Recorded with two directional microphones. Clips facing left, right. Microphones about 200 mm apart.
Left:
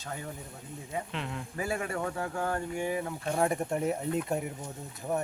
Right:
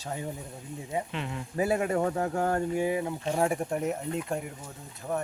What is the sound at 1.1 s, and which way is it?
Speech, 5° right (ahead or behind).